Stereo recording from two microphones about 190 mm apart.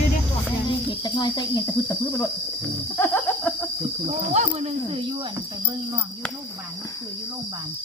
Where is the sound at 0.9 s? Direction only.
20° left (ahead or behind).